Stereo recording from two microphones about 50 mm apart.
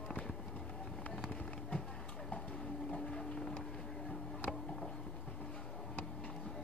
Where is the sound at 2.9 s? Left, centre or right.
Centre.